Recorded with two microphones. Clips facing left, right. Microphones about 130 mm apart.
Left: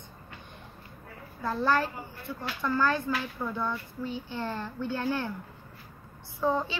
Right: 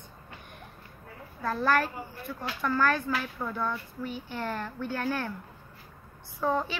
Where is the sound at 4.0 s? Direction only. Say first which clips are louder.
Left 1 dB; 20° left (ahead or behind).